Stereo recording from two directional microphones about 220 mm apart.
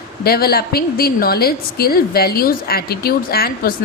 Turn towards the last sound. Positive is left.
turn(degrees=45)  # may be behind; listen again after turning